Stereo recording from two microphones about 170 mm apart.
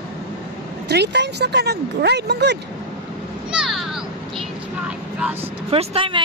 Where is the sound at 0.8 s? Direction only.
80° right.